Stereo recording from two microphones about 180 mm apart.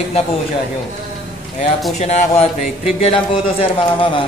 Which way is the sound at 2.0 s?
40° left (ahead or behind).